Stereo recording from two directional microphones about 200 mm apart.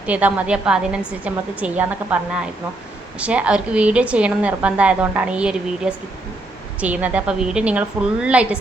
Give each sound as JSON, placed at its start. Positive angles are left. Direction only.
{"t": 0.0, "sound": "a woman's voice", "side_deg": -5}